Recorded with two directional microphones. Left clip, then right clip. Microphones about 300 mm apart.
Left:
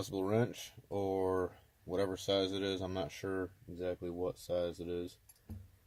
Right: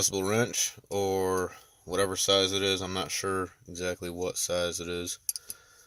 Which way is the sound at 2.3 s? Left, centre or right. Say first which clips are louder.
Right 10 dB; centre.